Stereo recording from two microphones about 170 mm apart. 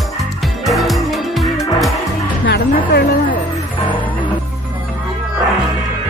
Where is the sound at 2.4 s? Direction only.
75° left (ahead or behind).